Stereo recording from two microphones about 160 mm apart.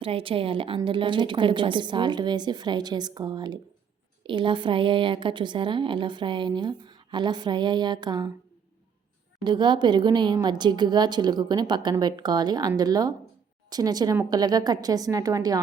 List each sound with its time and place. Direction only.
0.0 s a woman's voice: 35° right (ahead or behind)
9.4 s a woman's voice: 30° right (ahead or behind)